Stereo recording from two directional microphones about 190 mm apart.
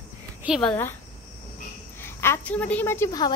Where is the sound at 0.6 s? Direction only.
10° left (ahead or behind).